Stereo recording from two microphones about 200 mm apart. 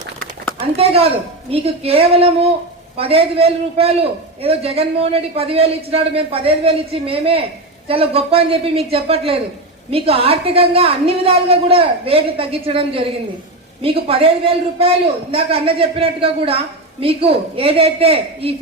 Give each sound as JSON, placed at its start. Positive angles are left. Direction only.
{"t": 0.6, "sound": "a woman's voice", "side_deg": -30}